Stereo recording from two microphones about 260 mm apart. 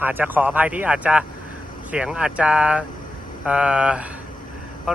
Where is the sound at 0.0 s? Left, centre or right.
Centre.